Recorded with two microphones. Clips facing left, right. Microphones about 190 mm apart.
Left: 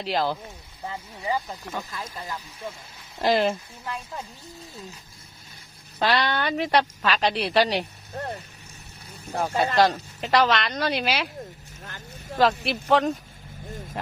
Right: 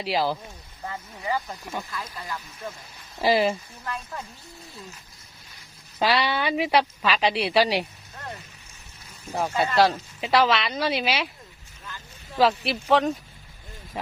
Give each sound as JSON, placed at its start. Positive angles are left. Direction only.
{"t": 0.0, "sound": "a woman's voice", "side_deg": -5}
{"t": 0.9, "sound": "speech", "side_deg": 15}
{"t": 3.2, "sound": "a woman's voice", "side_deg": -5}
{"t": 3.8, "sound": "speech", "side_deg": 15}
{"t": 6.0, "sound": "a woman's voice", "side_deg": -5}
{"t": 8.1, "sound": "speech", "side_deg": 40}
{"t": 9.2, "sound": "a woman's voice", "side_deg": 0}
{"t": 12.4, "sound": "a woman's voice", "side_deg": 0}